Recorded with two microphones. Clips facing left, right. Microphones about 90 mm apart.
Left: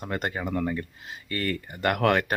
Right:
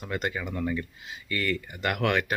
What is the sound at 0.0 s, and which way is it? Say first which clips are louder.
Speech: left 1 dB; 40° left (ahead or behind).